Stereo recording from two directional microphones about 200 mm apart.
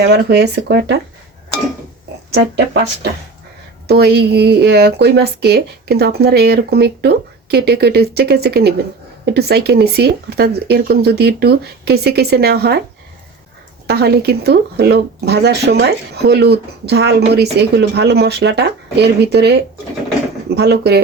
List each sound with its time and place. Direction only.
0.0 s speech: 55° right (ahead or behind)
2.3 s speech: 55° right (ahead or behind)
13.8 s speech: 55° right (ahead or behind)
20.6 s speech: 55° right (ahead or behind)